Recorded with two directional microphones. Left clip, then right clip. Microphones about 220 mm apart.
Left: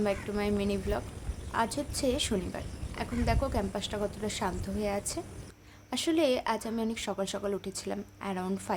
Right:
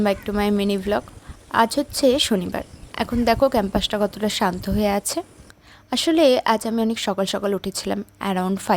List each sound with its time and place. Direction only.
0.0 s speech: 40° right (ahead or behind)